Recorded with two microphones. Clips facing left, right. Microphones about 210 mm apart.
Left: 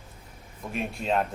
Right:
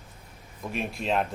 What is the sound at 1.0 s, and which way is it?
Speech, centre (ahead or behind).